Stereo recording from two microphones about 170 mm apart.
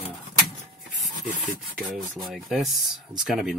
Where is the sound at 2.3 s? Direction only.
Centre (ahead or behind).